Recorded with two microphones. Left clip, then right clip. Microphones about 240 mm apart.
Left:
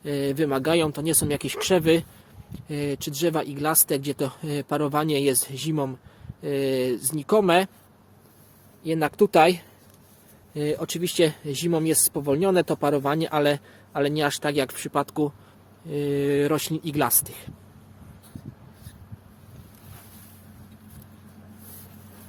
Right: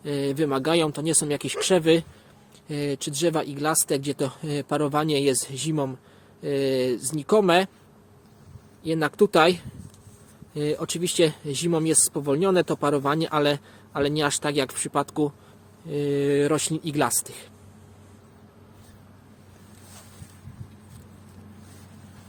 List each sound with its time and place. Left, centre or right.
0.0 s speech: centre
8.8 s speech: centre